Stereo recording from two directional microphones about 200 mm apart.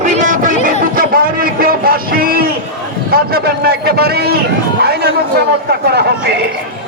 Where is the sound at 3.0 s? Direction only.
50° right (ahead or behind).